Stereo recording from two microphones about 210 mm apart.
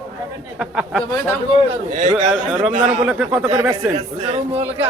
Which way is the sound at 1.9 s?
35° right (ahead or behind).